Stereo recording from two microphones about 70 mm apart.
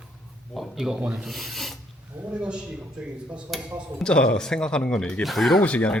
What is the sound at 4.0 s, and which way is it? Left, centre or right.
Speech, centre.